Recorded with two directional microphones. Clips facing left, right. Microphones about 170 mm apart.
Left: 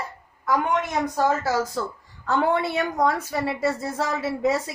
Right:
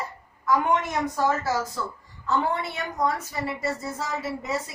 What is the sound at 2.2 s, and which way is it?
A woman's voice, 85° left.